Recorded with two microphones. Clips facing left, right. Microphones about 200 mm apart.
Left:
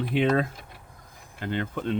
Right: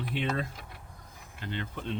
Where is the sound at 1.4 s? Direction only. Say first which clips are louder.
Left 8 dB; 50° left (ahead or behind).